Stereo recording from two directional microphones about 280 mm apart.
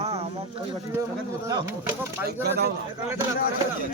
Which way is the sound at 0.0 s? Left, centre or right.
Right.